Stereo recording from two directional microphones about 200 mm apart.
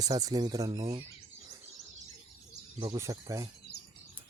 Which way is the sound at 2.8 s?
15° right (ahead or behind).